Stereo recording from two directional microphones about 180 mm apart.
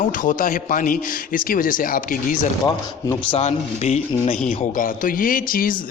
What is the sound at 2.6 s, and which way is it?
Speech, 25° left (ahead or behind).